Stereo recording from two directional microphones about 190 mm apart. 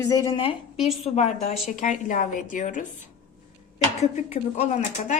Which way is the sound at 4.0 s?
35° left (ahead or behind).